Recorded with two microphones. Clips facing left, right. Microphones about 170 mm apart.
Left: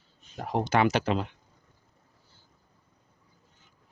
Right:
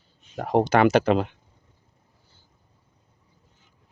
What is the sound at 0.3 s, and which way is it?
Speech, 60° right (ahead or behind).